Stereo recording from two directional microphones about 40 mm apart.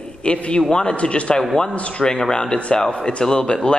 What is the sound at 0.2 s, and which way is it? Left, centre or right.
A man's voice, left.